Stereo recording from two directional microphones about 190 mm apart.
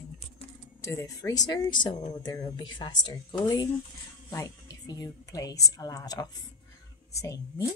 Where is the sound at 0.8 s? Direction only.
15° left (ahead or behind).